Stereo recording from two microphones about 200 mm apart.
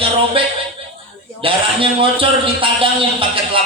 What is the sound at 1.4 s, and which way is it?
A man's voice, 25° right (ahead or behind).